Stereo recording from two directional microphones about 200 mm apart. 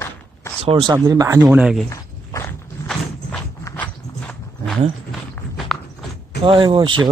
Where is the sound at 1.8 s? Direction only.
15° left (ahead or behind).